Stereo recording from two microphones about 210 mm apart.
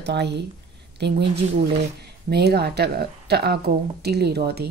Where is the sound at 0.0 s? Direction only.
55° right (ahead or behind).